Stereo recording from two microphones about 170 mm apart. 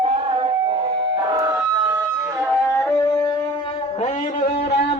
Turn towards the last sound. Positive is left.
turn(degrees=20)  # may be behind; listen again after turning